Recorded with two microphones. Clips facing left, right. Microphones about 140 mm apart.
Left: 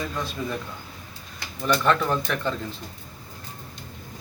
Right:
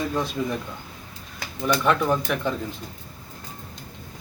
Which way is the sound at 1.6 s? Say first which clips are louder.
Right 1 dB; 10° right (ahead or behind).